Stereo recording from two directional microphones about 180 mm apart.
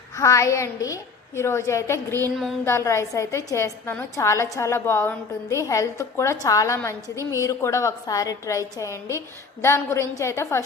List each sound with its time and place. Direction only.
0.2 s a woman's voice: 15° left (ahead or behind)
2.3 s a sound: centre (ahead or behind)
2.6 s a woman's voice: 15° left (ahead or behind)